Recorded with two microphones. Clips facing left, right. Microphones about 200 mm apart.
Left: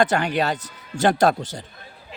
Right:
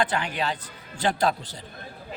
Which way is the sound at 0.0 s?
45° left (ahead or behind).